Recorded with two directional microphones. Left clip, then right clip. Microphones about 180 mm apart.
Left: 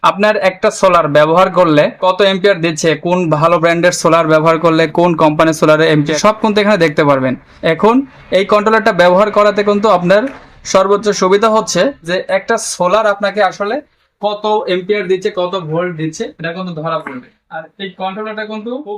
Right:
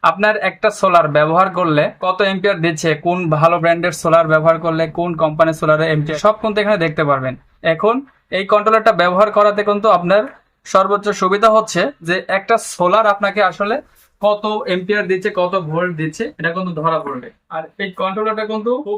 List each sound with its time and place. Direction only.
0.0 s a man's voice: 45° left (ahead or behind); by 13.7 s 20° left (ahead or behind)
14.2 s speech: 10° left (ahead or behind)